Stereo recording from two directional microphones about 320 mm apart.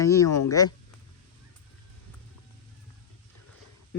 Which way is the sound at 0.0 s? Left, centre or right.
Centre.